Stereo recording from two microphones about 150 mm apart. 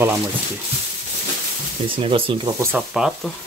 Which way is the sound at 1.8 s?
35° right (ahead or behind).